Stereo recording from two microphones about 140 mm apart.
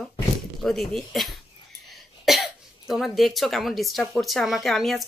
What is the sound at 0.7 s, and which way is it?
Speech, centre (ahead or behind).